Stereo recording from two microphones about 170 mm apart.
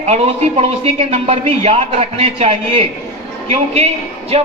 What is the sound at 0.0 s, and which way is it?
A man's voice, 35° right (ahead or behind).